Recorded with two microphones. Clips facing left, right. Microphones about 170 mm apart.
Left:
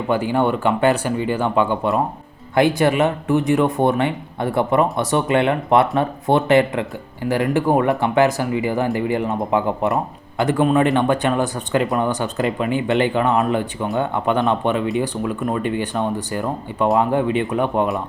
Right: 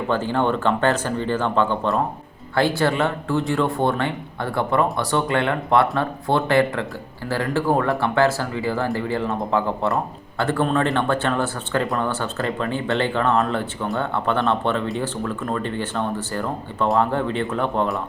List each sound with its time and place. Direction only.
0.1 s speech: 10° left (ahead or behind)